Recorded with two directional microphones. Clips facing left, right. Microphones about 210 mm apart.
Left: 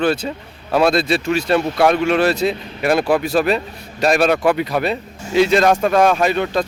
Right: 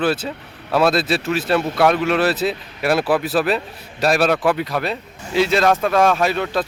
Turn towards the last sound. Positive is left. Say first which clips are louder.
# left 2 dB
turn(degrees=0)  # may be behind; listen again after turning